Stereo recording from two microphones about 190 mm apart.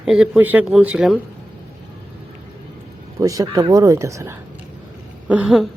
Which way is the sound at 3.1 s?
15° right (ahead or behind).